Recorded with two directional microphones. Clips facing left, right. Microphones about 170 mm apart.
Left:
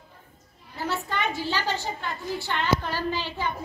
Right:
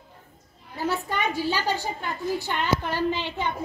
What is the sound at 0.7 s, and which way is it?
A child's voice, 15° right (ahead or behind).